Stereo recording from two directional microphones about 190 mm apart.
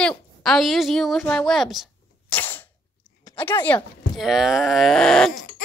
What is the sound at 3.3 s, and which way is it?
Speech, 10° left (ahead or behind).